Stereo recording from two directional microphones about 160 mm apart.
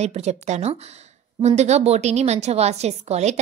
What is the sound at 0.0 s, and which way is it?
A woman's voice, 45° right (ahead or behind).